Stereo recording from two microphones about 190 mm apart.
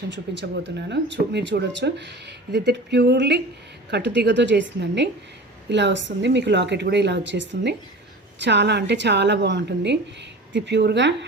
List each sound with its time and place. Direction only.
0.1 s a woman's voice: 65° right (ahead or behind)